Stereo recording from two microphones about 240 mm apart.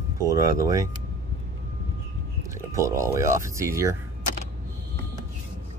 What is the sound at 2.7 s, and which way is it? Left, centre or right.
Speech, centre.